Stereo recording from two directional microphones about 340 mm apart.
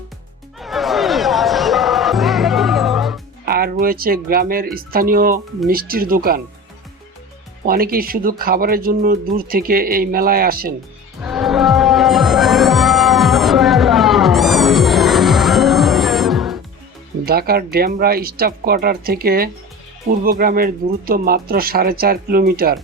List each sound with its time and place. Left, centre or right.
0.6 s music: centre
3.4 s speech: right
7.6 s speech: right
11.2 s music: centre
17.2 s speech: right